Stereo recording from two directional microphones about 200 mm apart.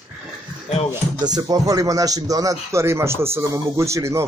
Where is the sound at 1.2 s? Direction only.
20° right (ahead or behind).